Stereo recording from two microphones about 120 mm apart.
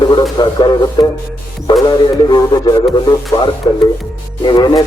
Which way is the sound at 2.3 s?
35° left (ahead or behind).